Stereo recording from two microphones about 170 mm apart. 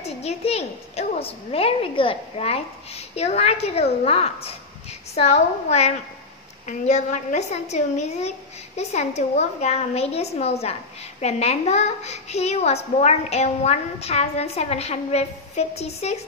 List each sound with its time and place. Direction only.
0.0 s a woman's voice: 40° left (ahead or behind)